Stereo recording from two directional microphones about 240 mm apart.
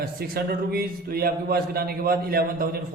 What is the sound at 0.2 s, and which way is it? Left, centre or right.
A man's voice, right.